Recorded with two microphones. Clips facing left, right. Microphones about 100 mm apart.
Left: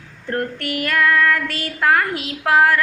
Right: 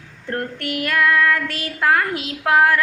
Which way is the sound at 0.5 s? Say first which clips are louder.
Right 3 dB; 20° right (ahead or behind).